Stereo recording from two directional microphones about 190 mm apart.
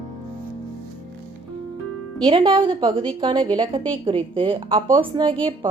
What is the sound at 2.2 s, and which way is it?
Speech, 25° right (ahead or behind).